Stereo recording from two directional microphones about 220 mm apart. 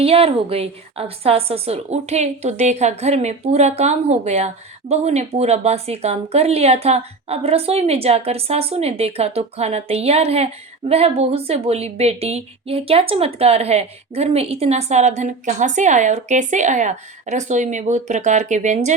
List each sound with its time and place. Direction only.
0.0 s a woman's voice: 25° right (ahead or behind)